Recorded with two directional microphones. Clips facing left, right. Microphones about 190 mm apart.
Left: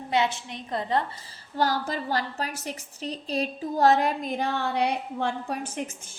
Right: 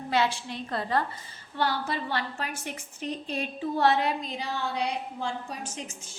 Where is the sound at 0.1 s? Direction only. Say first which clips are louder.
Left 1 dB; 20° left (ahead or behind).